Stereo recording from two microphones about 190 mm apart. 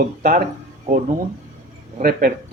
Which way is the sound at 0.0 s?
45° right (ahead or behind).